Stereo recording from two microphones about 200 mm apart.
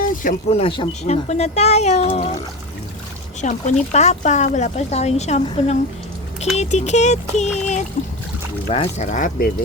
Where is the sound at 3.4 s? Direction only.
35° left (ahead or behind).